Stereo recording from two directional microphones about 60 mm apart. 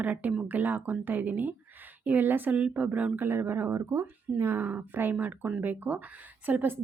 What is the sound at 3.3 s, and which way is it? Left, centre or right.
A woman's voice, right.